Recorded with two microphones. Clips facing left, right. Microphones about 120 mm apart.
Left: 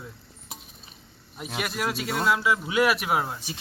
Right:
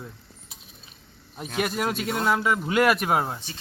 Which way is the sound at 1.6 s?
45° right (ahead or behind).